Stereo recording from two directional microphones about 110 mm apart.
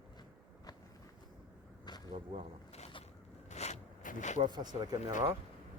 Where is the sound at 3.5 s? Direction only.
90° left.